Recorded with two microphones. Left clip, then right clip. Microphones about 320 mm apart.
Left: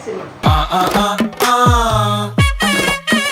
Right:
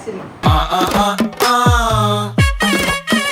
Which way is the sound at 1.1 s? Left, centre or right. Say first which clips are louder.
Even; centre.